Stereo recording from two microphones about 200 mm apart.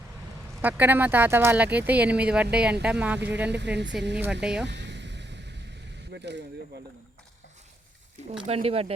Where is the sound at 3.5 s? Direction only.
60° right (ahead or behind).